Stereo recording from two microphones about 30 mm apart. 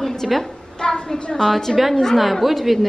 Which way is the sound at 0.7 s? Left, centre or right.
Left.